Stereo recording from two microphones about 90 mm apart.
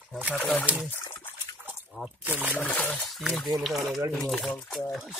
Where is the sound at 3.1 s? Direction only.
Centre (ahead or behind).